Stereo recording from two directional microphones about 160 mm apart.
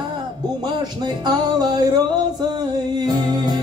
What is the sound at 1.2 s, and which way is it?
Music, 25° right (ahead or behind).